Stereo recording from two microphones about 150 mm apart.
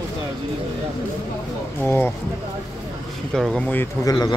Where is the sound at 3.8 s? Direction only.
25° left (ahead or behind).